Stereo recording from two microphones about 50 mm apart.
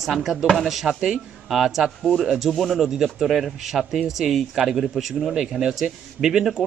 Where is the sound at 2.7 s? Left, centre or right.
Centre.